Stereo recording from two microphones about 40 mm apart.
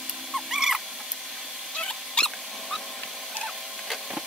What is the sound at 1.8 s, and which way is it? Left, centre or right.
Rodents, centre.